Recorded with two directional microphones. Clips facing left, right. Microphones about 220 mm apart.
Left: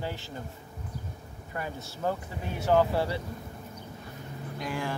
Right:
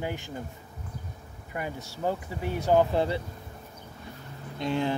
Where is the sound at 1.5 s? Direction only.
15° right (ahead or behind).